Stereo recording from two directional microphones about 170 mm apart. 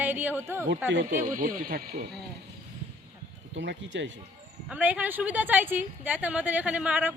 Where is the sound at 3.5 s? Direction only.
90° right.